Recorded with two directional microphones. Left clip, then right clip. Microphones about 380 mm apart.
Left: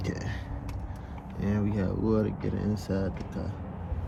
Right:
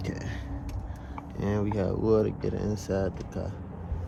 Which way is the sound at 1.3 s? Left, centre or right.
Centre.